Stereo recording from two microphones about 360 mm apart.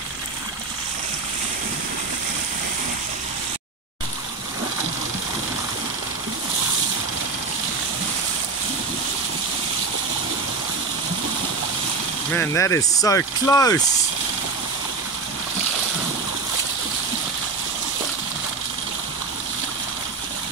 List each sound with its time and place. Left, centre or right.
12.4 s speech: centre